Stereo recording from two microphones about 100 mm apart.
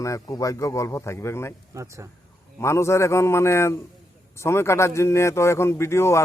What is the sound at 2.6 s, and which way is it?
A man's voice, 30° left (ahead or behind).